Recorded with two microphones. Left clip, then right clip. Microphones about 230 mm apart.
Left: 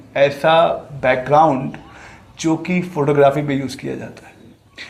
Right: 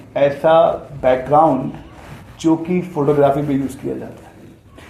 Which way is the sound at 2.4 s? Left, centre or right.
Left.